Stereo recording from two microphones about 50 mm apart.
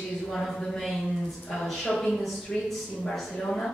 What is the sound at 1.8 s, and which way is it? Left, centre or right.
Speech, centre.